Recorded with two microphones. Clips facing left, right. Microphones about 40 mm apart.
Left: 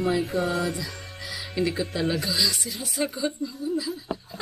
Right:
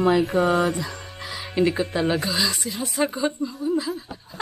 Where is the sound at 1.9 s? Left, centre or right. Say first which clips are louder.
Right 3 dB; right.